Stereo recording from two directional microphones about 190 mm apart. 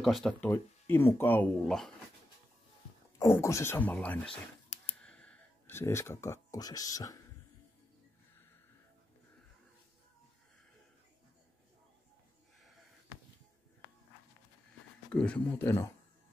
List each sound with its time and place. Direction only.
0.0 s speech: centre (ahead or behind)
0.5 s speech: 10° left (ahead or behind)
3.2 s speech: 15° left (ahead or behind)
4.3 s a sound: 35° left (ahead or behind)
5.0 s speech: 5° left (ahead or behind)
15.1 s speech: 5° left (ahead or behind)